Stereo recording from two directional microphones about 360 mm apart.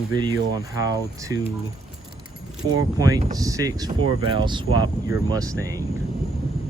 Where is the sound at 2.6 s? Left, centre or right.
Centre.